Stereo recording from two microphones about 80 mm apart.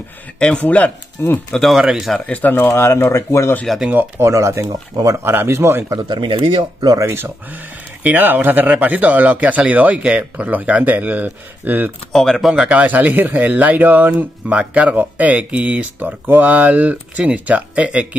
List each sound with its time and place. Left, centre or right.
0.4 s speech: centre
1.5 s a man's voice: centre
2.1 s speech: centre
2.7 s speech: left
4.2 s speech: right
5.9 s speech: right
7.1 s speech: right
12.1 s a man's voice: centre
12.5 s speech: centre